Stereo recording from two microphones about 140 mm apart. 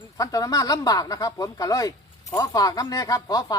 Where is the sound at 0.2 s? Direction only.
25° left (ahead or behind).